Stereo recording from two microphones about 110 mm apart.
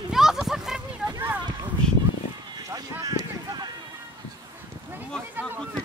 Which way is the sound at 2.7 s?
35° right (ahead or behind).